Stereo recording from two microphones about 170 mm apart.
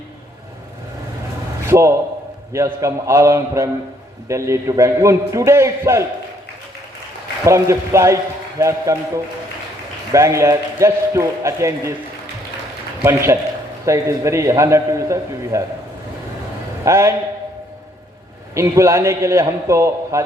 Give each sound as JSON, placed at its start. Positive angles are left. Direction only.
{"t": 1.6, "sound": "a man's voice", "side_deg": -15}
{"t": 7.4, "sound": "a man's voice", "side_deg": -15}
{"t": 10.1, "sound": "a man's voice", "side_deg": -15}
{"t": 13.0, "sound": "a man's voice", "side_deg": -15}
{"t": 16.8, "sound": "a man's voice", "side_deg": -15}
{"t": 18.5, "sound": "a man's voice", "side_deg": -15}